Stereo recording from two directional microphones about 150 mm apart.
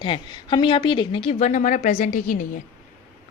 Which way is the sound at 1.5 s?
55° left (ahead or behind).